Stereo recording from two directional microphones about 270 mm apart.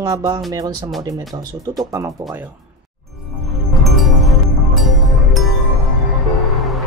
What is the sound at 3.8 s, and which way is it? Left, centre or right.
Music, centre.